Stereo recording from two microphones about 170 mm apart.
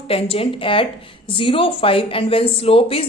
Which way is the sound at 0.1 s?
35° left (ahead or behind).